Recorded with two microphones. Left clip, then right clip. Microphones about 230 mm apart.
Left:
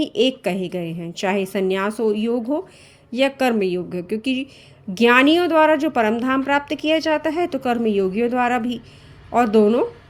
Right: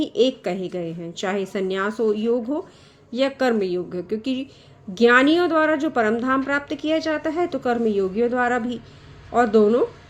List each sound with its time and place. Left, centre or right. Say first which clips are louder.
0.0 s a woman's voice: left 1 dB; left